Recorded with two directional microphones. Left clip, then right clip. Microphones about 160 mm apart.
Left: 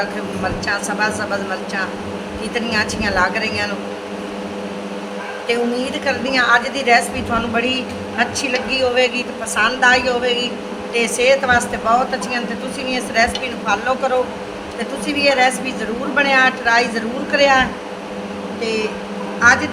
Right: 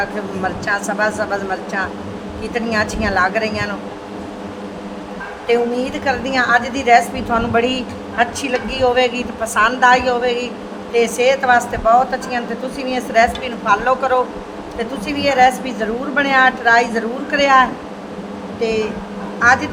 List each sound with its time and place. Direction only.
0.4 s a woman's voice: 60° right (ahead or behind)
5.5 s a woman's voice: 60° right (ahead or behind)